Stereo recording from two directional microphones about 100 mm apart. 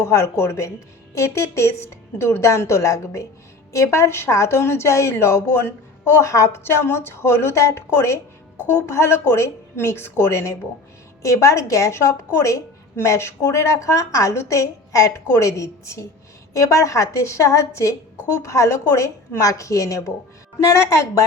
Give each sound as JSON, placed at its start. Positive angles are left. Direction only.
{"t": 0.0, "sound": "a woman's voice", "side_deg": 30}